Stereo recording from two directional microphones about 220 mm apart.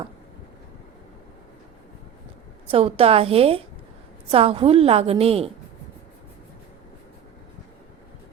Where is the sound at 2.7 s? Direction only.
25° right (ahead or behind).